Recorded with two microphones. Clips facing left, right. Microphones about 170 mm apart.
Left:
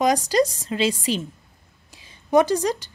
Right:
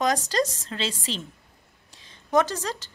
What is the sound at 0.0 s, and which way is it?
A woman's voice, 10° left (ahead or behind).